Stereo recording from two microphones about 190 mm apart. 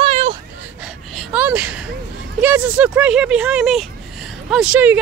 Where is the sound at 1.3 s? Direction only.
5° right (ahead or behind).